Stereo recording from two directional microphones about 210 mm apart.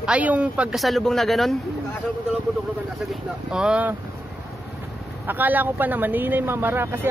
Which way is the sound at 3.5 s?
5° right (ahead or behind).